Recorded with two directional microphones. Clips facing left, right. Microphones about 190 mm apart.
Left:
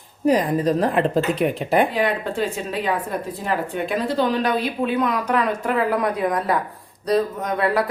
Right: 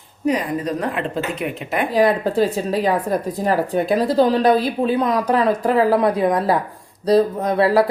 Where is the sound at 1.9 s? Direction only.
40° right (ahead or behind).